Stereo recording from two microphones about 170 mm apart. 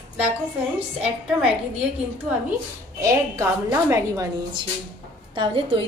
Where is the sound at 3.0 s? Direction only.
15° right (ahead or behind).